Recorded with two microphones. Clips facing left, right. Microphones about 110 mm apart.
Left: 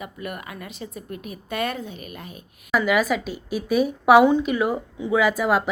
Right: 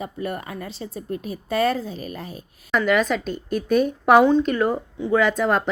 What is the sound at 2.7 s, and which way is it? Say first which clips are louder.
Speech: right 1 dB; 5° left (ahead or behind).